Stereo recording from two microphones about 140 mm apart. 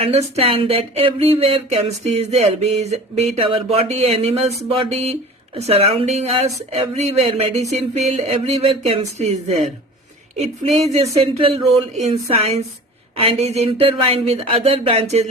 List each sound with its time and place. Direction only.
0.3 s speech: 45° right (ahead or behind)